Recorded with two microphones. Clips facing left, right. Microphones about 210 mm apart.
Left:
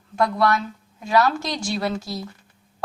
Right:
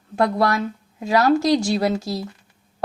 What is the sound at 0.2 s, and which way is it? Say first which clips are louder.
A woman's voice: right 1 dB; 35° right (ahead or behind).